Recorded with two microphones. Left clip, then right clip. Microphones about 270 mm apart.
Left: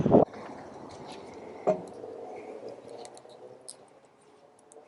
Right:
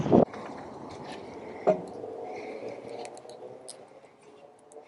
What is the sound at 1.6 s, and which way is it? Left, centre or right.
Frog, right.